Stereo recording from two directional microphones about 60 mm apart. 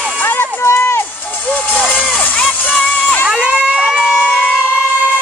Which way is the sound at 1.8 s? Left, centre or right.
Left.